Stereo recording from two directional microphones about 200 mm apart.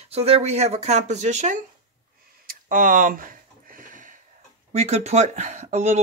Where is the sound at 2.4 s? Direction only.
45° right (ahead or behind).